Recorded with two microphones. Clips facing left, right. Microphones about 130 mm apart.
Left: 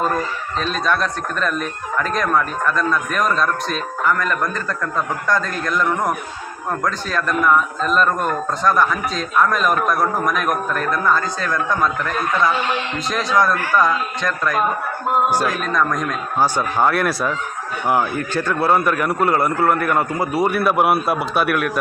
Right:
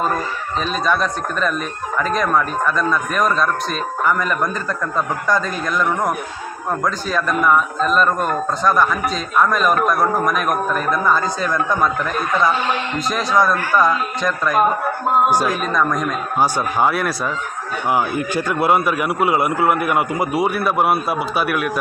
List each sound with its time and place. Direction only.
0.6 s a man's voice: 5° right (ahead or behind)
20.5 s a man's voice: centre (ahead or behind)